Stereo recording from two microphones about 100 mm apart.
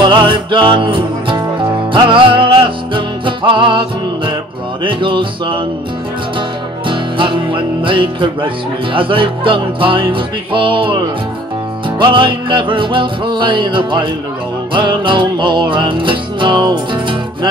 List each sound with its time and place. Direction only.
0.0 s music: 50° right (ahead or behind)
4.8 s music: 55° right (ahead or behind)
6.9 s music: 55° right (ahead or behind)
12.0 s music: 55° right (ahead or behind)